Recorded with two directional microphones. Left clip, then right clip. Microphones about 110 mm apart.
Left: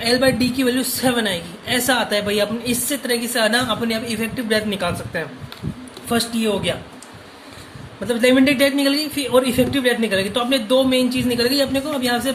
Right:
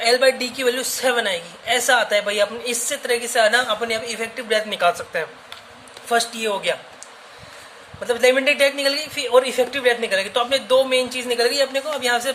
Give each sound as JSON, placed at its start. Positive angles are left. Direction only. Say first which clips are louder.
{"t": 0.0, "sound": "a woman's voice", "louder": "right 1 dB", "side_deg": -35}
{"t": 8.0, "sound": "speech", "louder": "left 1 dB", "side_deg": -30}